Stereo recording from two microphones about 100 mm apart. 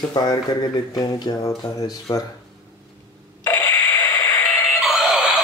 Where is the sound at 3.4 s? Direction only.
20° left (ahead or behind).